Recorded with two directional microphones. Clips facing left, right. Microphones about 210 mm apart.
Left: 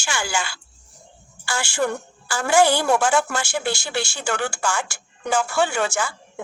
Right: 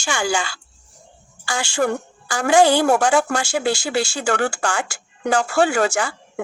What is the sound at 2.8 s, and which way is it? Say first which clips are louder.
Speech: right 3 dB; 45° right (ahead or behind).